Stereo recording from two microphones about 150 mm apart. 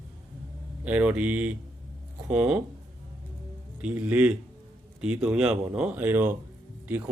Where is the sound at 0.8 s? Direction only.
10° right (ahead or behind).